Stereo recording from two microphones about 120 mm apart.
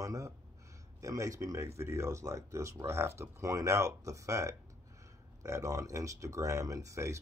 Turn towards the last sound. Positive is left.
turn(degrees=-25)  # may be behind; listen again after turning